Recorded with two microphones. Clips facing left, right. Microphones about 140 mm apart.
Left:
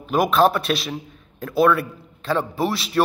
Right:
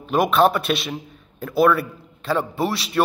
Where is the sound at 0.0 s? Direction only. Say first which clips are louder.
Even; centre (ahead or behind).